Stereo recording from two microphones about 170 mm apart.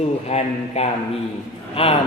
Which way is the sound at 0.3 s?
40° left (ahead or behind).